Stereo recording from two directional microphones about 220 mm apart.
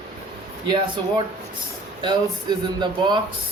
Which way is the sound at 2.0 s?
20° right (ahead or behind).